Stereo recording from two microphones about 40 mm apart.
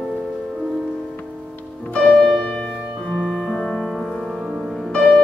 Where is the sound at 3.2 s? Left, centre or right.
Centre.